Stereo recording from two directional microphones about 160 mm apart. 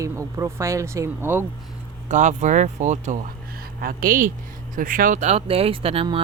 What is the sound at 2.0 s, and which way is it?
Speech, 50° right (ahead or behind).